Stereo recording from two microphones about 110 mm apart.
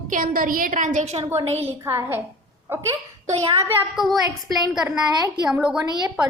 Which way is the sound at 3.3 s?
70° right (ahead or behind).